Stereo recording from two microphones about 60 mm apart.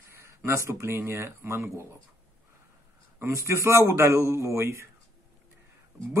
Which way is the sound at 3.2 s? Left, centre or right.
Right.